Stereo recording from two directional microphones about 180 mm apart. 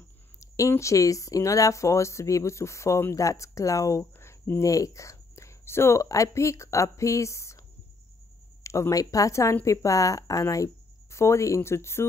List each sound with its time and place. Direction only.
0.4 s speech: 15° left (ahead or behind)
8.6 s speech: 15° left (ahead or behind)